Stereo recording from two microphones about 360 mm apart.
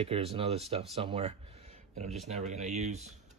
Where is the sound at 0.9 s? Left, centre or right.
Centre.